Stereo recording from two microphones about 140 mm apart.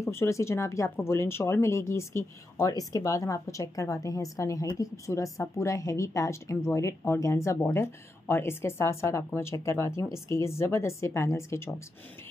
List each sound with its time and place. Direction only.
0.0 s speech: 20° left (ahead or behind)